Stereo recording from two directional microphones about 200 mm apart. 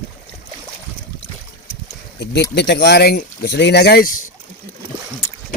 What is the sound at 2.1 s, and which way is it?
Speech, 60° left (ahead or behind).